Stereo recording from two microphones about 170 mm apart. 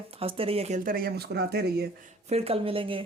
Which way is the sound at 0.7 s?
55° right (ahead or behind).